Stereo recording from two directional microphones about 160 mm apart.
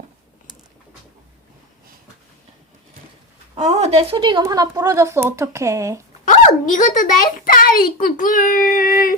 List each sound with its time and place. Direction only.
3.5 s speech: 40° right (ahead or behind); by 6.0 s 20° right (ahead or behind)
6.2 s speech: 55° left (ahead or behind)